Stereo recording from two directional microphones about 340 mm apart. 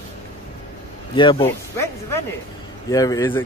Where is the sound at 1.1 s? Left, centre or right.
Centre.